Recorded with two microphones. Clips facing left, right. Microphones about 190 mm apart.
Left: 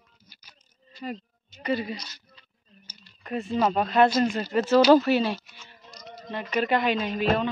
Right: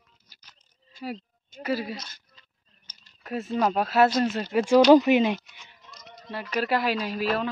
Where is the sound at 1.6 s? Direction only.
5° right (ahead or behind).